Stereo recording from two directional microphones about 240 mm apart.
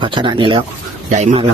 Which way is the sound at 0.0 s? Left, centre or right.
Centre.